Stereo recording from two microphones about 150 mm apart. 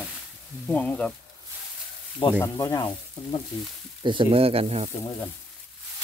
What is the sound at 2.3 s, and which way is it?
Speech, 20° left (ahead or behind).